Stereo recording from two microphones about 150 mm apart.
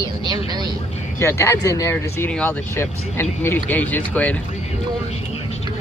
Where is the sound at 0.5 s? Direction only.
25° right (ahead or behind).